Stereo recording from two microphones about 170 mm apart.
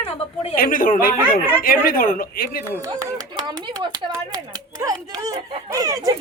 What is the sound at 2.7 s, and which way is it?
Speech, 20° right (ahead or behind).